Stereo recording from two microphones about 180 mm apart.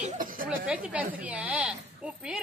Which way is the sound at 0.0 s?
45° right (ahead or behind).